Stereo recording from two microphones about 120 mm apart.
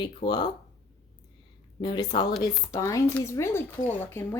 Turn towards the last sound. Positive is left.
turn(degrees=20)  # may be behind; listen again after turning